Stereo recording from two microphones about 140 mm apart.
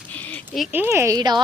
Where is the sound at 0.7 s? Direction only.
15° right (ahead or behind).